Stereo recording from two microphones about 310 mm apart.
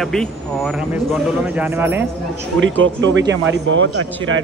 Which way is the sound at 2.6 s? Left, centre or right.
Right.